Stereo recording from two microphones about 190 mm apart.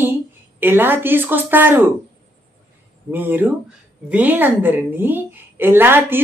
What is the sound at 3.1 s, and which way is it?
A woman's voice, 10° right (ahead or behind).